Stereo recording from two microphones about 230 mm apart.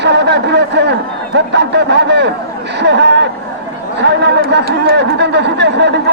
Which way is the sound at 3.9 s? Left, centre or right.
Right.